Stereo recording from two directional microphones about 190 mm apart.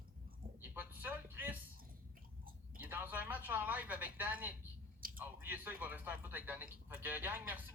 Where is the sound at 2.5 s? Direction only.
50° right (ahead or behind).